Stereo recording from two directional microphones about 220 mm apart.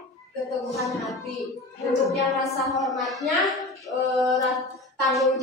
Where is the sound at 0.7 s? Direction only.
Centre (ahead or behind).